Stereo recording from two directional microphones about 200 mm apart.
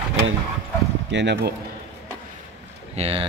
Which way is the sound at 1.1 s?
60° right (ahead or behind).